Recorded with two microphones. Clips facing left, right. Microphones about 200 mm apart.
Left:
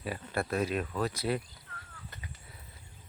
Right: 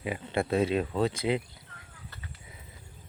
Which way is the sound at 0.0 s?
20° right (ahead or behind).